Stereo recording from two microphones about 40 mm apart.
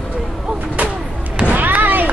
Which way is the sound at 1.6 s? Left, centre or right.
Right.